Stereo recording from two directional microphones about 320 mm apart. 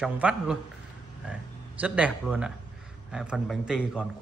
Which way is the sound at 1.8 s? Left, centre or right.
Centre.